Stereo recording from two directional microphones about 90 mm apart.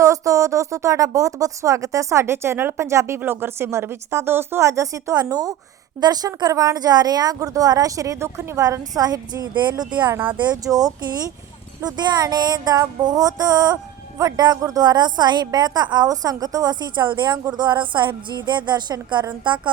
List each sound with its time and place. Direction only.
0.0 s speech: 35° right (ahead or behind)
10.1 s speech: 20° right (ahead or behind)
10.4 s a woman's voice: 45° right (ahead or behind)